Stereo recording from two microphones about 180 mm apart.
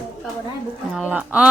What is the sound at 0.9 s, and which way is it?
Speech, 5° right (ahead or behind).